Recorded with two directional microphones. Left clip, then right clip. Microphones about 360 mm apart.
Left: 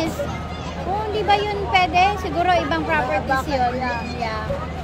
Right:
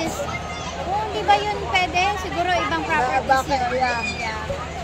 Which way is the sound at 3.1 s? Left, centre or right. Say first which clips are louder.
Right 2 dB; right.